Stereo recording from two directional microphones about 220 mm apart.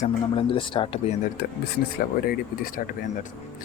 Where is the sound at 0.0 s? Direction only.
25° left (ahead or behind).